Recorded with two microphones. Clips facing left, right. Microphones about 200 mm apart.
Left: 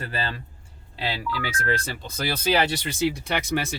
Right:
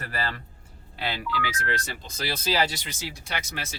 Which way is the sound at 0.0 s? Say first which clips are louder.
Left 2 dB; 25° left (ahead or behind).